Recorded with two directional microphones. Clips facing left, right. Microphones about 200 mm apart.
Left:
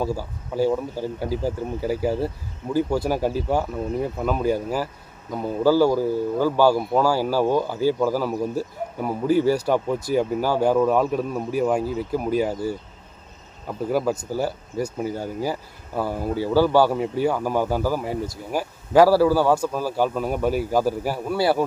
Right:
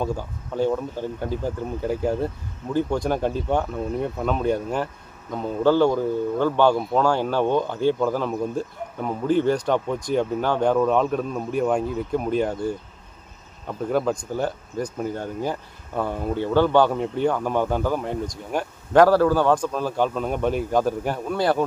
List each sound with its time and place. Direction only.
0.0 s speech: 5° left (ahead or behind)